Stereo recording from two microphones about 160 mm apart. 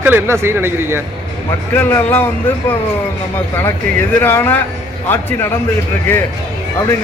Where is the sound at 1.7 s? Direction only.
15° left (ahead or behind).